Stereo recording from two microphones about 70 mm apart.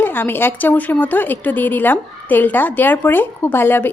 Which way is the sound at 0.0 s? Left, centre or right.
Left.